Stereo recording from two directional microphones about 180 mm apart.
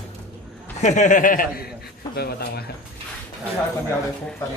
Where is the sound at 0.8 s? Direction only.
40° left (ahead or behind); by 2.6 s 60° left (ahead or behind).